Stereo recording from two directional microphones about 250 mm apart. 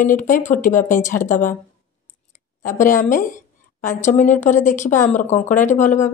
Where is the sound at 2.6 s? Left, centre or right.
Left.